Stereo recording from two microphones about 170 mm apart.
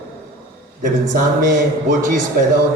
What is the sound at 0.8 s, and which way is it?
A man's voice, 50° right (ahead or behind).